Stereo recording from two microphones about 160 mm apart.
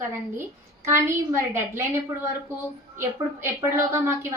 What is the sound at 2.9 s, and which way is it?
Speech, 15° right (ahead or behind).